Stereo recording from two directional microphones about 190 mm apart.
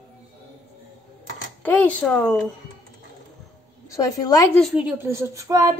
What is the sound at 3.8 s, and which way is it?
Speech, 15° left (ahead or behind).